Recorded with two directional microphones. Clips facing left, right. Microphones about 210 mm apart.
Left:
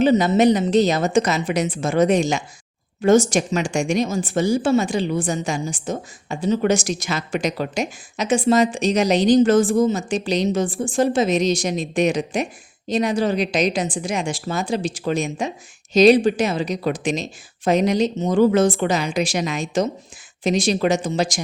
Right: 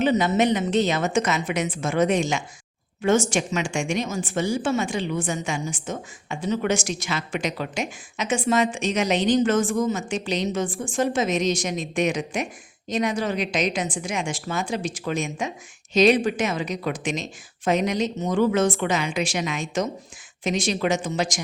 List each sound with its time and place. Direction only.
0.0 s a woman's voice: 30° left (ahead or behind)